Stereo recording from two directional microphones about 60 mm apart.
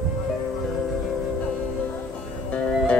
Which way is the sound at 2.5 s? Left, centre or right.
Centre.